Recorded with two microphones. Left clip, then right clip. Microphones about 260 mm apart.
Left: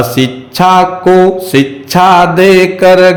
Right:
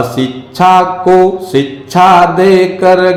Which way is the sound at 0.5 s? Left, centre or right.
Left.